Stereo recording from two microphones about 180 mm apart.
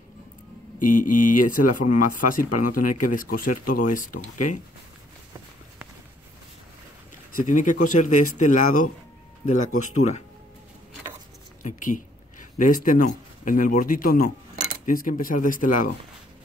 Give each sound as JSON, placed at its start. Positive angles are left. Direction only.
{"t": 0.8, "sound": "speech", "side_deg": 45}
{"t": 7.3, "sound": "speech", "side_deg": 45}
{"t": 11.6, "sound": "speech", "side_deg": 45}